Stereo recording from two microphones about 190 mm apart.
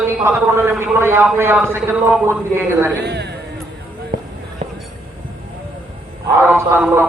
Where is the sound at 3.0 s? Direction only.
60° right (ahead or behind).